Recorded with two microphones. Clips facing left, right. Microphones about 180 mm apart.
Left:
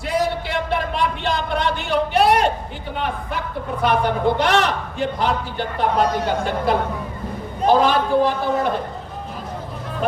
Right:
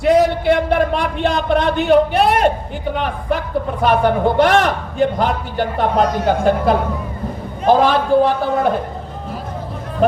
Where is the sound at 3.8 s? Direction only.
50° right (ahead or behind).